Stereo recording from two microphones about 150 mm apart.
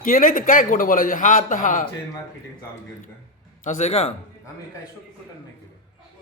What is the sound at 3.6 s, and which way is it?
Speech, 55° left (ahead or behind).